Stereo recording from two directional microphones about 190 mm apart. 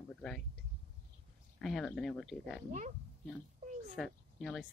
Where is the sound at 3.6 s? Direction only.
40° right (ahead or behind).